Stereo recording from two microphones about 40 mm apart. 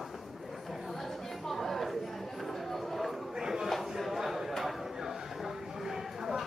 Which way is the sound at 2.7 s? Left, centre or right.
Centre.